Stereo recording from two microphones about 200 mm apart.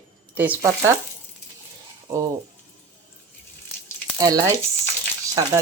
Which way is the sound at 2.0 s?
15° right (ahead or behind).